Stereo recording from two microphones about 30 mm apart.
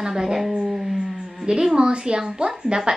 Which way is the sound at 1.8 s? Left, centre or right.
Right.